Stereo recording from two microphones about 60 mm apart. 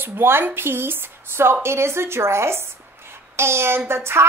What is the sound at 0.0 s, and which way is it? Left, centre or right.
A woman's voice, right.